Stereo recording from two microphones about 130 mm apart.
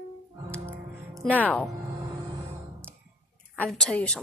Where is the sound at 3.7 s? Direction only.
5° left (ahead or behind).